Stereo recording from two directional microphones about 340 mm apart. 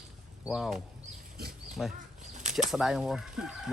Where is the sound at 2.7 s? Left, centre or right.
Centre.